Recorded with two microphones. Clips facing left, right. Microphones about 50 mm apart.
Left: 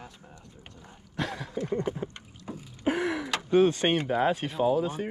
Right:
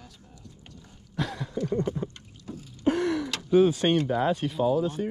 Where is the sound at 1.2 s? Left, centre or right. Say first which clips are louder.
Right 1 dB; centre.